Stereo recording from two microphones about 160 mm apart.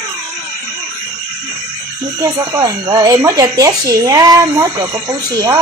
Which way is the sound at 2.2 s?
20° right (ahead or behind).